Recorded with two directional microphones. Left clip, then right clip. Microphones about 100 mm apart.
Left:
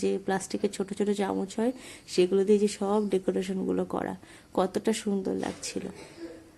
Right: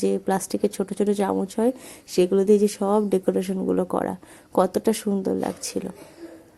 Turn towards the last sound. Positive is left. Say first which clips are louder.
# right 6 dB
turn(degrees=-45)  # may be behind; listen again after turning